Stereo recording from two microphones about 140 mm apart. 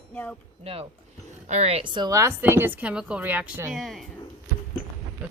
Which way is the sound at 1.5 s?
50° right (ahead or behind).